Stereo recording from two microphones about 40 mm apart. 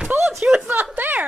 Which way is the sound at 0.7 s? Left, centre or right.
Right.